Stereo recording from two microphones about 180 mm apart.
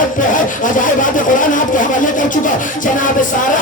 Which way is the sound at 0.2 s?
45° left (ahead or behind).